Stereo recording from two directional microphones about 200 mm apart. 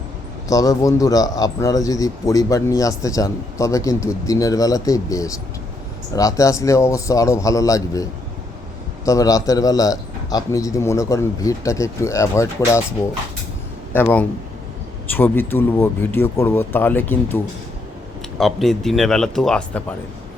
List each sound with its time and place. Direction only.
0.4 s a man's voice: 15° left (ahead or behind)
9.0 s a man's voice: 15° left (ahead or behind)
13.9 s a man's voice: 10° left (ahead or behind)